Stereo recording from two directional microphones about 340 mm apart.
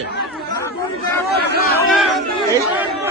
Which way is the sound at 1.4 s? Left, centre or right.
Left.